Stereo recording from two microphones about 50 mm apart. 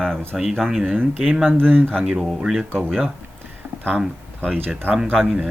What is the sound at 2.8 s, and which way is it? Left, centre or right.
Speech, centre.